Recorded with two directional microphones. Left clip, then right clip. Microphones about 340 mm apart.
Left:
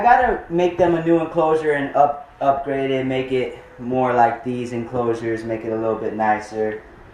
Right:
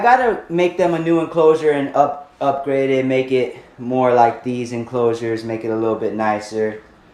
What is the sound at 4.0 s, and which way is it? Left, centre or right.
Speech, centre.